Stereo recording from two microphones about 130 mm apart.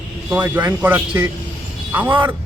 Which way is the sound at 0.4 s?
15° right (ahead or behind).